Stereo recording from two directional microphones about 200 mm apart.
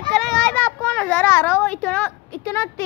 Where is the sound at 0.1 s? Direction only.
Centre (ahead or behind).